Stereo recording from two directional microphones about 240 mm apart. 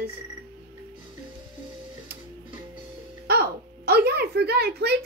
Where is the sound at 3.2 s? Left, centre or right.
Right.